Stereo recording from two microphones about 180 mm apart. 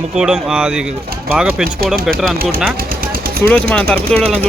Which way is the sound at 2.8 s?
55° right (ahead or behind).